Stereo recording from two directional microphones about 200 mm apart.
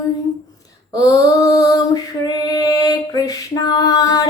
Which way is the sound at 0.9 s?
20° left (ahead or behind).